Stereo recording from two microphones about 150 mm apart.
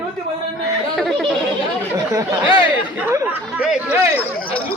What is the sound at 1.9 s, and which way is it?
Speech, 20° right (ahead or behind).